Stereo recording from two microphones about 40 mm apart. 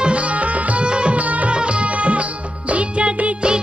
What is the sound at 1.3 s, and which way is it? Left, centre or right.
Music, right.